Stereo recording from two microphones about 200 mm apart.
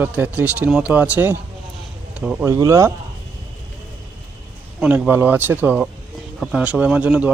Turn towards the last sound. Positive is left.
turn(degrees=-5)  # may be behind; listen again after turning